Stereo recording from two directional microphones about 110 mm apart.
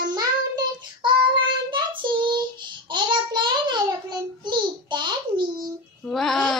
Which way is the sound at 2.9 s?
45° right (ahead or behind).